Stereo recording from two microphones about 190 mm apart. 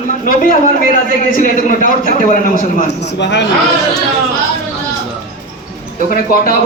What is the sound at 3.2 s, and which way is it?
Speech, 70° left (ahead or behind).